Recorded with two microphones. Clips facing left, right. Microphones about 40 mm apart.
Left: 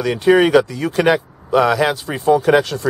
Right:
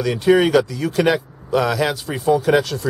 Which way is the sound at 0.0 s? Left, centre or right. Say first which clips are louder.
Left 2 dB; centre.